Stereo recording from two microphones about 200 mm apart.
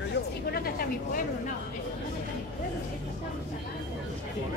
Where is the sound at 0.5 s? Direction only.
50° left (ahead or behind).